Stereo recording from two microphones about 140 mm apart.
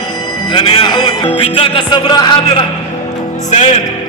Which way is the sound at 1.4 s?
40° left (ahead or behind).